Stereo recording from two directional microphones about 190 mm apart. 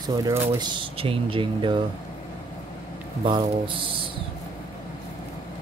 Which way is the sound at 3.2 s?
25° right (ahead or behind).